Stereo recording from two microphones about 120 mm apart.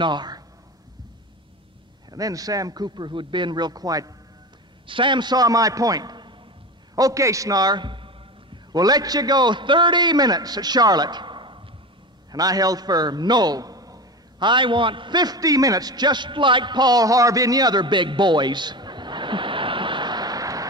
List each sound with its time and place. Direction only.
0.0 s a man's voice: 35° right (ahead or behind)
2.0 s a man's voice: 30° right (ahead or behind)
4.8 s a man's voice: 45° right (ahead or behind)